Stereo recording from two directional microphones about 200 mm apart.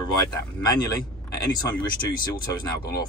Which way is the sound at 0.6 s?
20° left (ahead or behind).